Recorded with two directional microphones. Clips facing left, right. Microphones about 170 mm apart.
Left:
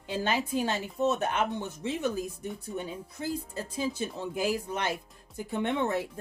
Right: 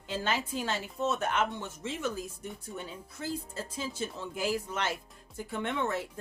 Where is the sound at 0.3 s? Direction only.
15° left (ahead or behind).